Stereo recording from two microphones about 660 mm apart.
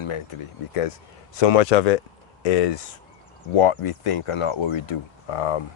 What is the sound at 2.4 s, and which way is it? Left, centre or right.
Speech, left.